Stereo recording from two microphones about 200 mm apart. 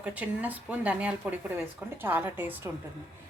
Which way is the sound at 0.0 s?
5° right (ahead or behind).